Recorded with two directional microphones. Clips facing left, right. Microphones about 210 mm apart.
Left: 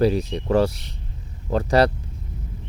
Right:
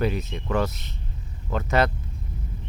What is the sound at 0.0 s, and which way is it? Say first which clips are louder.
Speech: left 6 dB; 35° left (ahead or behind).